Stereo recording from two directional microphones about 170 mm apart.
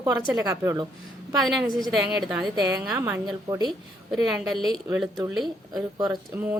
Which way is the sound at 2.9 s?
15° right (ahead or behind).